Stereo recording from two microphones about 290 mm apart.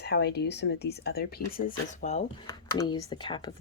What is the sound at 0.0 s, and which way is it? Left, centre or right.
Speech, left.